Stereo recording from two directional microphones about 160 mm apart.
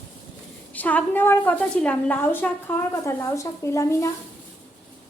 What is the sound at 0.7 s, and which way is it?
A woman's voice, 10° left (ahead or behind).